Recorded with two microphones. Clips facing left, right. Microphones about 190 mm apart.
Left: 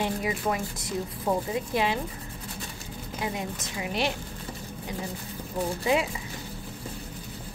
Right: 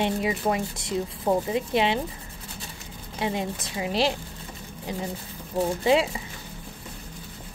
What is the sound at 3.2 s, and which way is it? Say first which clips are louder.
Speech: right 4 dB; 30° right (ahead or behind).